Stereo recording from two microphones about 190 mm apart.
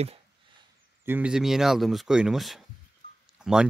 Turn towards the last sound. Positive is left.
turn(degrees=-5)  # may be behind; listen again after turning